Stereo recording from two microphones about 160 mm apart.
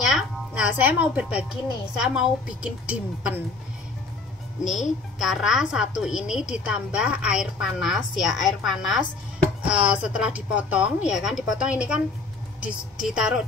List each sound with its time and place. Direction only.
0.0 s a woman's voice: 5° right (ahead or behind)
4.6 s speech: 50° left (ahead or behind)
5.2 s a woman's voice: centre (ahead or behind)